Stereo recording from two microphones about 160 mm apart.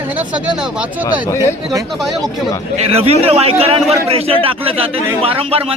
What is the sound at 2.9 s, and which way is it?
A man's voice, 40° right (ahead or behind).